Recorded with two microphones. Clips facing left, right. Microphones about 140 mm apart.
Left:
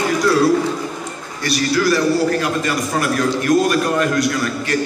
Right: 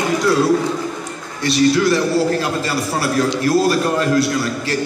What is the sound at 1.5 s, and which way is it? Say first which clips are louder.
A man's voice: right 3 dB; 25° right (ahead or behind).